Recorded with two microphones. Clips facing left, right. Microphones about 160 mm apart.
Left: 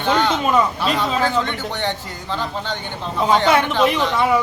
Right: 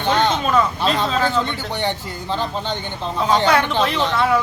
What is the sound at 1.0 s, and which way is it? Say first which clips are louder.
Speech: even; 15° left (ahead or behind).